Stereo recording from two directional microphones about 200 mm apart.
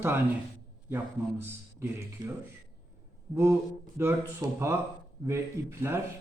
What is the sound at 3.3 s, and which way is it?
A man's voice, 10° right (ahead or behind).